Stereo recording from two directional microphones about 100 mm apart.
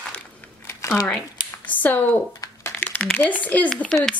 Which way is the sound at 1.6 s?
15° left (ahead or behind).